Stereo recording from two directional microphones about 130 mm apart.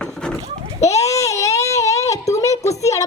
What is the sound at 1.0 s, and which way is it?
Baby cry, 25° left (ahead or behind).